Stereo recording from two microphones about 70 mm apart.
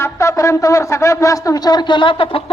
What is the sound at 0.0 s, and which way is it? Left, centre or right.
A man's voice, left.